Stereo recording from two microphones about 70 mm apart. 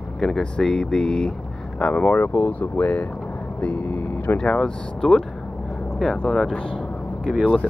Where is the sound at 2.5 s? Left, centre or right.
Left.